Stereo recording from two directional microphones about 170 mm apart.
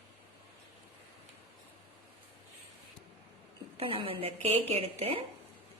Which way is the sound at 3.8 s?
35° right (ahead or behind).